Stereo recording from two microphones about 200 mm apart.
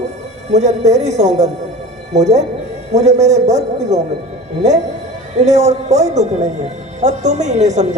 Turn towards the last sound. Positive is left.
turn(degrees=-35)  # may be behind; listen again after turning